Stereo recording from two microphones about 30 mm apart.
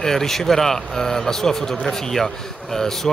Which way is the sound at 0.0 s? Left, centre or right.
Centre.